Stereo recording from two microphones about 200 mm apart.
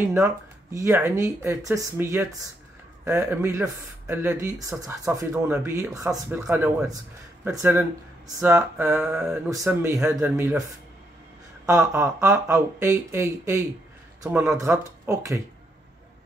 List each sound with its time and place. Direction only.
0.7 s speech: 15° right (ahead or behind)
9.1 s mantra: centre (ahead or behind)
9.5 s speech: 15° right (ahead or behind)
11.6 s speech: 15° right (ahead or behind)